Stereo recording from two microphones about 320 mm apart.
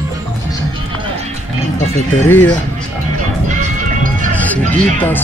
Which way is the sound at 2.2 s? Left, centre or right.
Centre.